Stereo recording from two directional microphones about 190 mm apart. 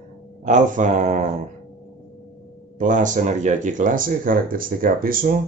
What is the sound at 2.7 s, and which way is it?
Speech, 40° right (ahead or behind).